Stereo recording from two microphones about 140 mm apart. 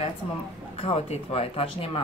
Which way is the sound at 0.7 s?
45° left (ahead or behind).